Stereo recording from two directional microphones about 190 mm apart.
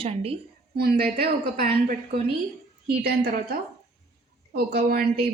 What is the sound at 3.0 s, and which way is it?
Speech, 55° right (ahead or behind).